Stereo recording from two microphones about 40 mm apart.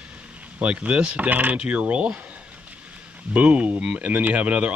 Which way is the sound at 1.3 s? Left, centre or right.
Right.